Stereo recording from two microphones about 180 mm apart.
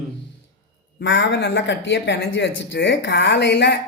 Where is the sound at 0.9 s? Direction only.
90° left.